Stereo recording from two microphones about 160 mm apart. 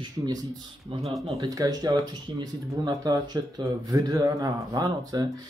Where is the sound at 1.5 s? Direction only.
25° right (ahead or behind).